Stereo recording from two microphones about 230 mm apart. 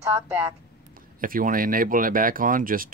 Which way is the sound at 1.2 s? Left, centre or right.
Right.